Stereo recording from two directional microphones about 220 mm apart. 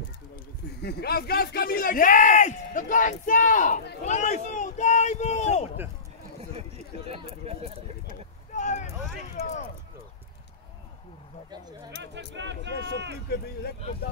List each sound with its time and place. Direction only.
0.8 s speech: 45° left (ahead or behind)
7.1 s speech: 25° right (ahead or behind)
8.1 s vehicle: 35° left (ahead or behind)
9.4 s a sound: 30° left (ahead or behind)
12.0 s speech: 55° right (ahead or behind)